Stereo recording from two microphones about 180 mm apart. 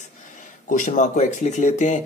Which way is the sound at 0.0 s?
45° left (ahead or behind).